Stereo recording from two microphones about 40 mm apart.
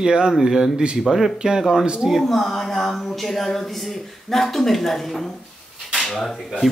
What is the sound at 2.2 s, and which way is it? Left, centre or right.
Speech, centre.